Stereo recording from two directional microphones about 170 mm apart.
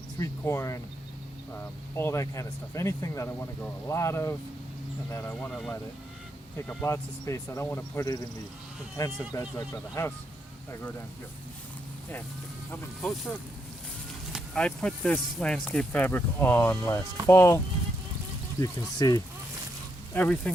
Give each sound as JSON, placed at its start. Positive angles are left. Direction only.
{"t": 0.2, "sound": "speech", "side_deg": 15}
{"t": 6.8, "sound": "speech", "side_deg": 15}
{"t": 9.3, "sound": "speech", "side_deg": 20}
{"t": 12.7, "sound": "speech", "side_deg": 5}
{"t": 14.3, "sound": "speech", "side_deg": 5}
{"t": 18.6, "sound": "speech", "side_deg": 20}
{"t": 20.1, "sound": "speech", "side_deg": 5}